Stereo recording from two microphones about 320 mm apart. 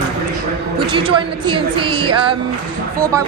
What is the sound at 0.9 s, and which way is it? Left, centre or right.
A woman's voice, centre.